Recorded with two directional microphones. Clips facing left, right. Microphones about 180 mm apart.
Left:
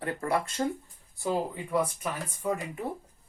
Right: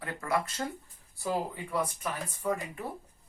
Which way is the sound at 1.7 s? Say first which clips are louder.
Left 4 dB; 15° left (ahead or behind).